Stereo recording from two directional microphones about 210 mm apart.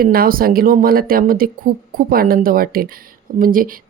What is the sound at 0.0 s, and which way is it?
Speech, 45° right (ahead or behind).